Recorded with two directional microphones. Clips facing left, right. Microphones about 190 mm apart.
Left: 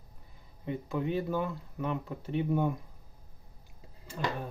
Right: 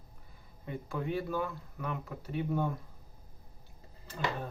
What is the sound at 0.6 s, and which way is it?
Speech, 20° left (ahead or behind).